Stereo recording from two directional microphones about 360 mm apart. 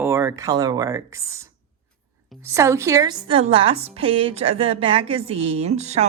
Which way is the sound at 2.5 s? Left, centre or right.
Centre.